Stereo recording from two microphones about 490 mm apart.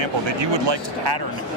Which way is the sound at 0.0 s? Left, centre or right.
Right.